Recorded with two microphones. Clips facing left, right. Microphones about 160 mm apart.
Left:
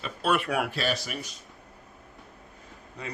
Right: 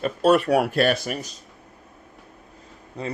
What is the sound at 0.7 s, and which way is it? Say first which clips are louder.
Speech: right 9 dB; 55° right (ahead or behind).